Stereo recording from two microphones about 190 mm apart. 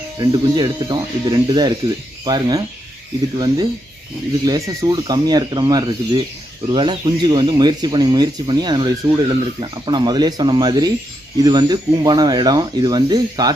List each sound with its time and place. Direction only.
0.2 s speech: 20° right (ahead or behind)